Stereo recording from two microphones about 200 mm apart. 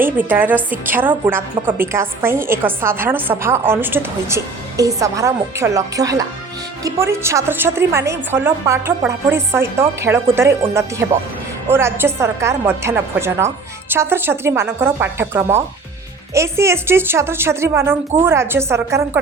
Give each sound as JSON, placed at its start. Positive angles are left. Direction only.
{"t": 0.0, "sound": "a woman's voice", "side_deg": -10}